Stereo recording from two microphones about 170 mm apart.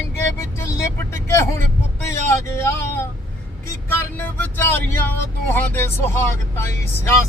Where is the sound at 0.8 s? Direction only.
15° left (ahead or behind).